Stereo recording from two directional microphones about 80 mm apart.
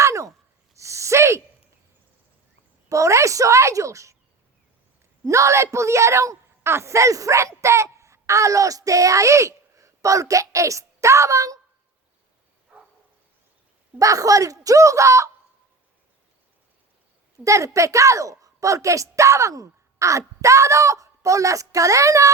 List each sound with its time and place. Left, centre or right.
0.0 s sigh: right
0.8 s gasp: right
2.9 s speech: right
5.2 s speech: right
12.7 s a sound: centre
14.0 s a woman's voice: right
17.4 s a woman's voice: right